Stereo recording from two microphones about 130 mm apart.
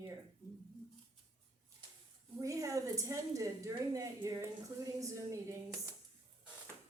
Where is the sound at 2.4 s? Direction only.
25° right (ahead or behind).